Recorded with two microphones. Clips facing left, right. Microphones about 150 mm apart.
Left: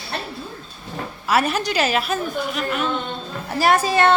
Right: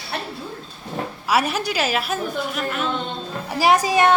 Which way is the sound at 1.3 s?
5° right (ahead or behind).